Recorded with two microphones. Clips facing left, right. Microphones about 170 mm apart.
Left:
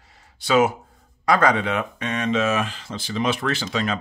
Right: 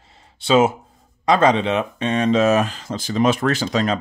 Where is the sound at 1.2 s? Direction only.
25° right (ahead or behind).